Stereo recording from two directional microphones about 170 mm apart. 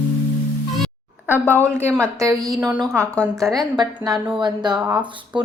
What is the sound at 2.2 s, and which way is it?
Speech, 20° right (ahead or behind).